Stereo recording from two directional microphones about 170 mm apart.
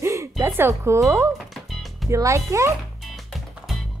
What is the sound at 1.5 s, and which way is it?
Music, centre (ahead or behind).